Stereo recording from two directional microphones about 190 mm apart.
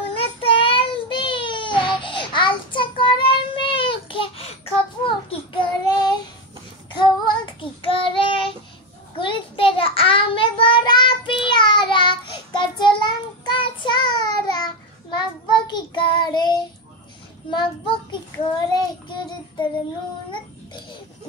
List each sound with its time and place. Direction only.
0.1 s child singing: 30° left (ahead or behind)